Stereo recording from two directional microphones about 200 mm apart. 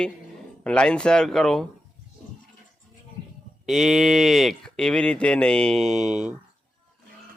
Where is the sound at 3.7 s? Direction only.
Centre (ahead or behind).